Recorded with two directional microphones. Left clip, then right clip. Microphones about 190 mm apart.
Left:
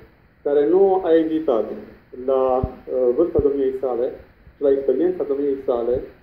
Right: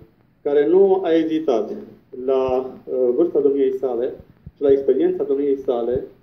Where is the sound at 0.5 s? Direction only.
25° right (ahead or behind).